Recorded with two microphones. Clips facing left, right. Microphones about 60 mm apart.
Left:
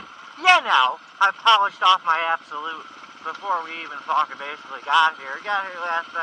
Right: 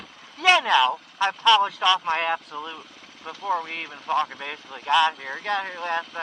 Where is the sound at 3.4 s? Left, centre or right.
Left.